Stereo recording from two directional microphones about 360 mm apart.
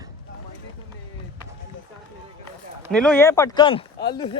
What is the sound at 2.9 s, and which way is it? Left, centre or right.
Speech, centre.